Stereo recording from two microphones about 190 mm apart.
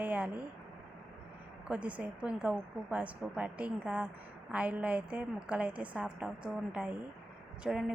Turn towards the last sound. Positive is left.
turn(degrees=-5)  # may be behind; listen again after turning